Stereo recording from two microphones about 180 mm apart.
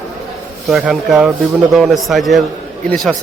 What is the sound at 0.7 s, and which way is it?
A man's voice, 5° right (ahead or behind).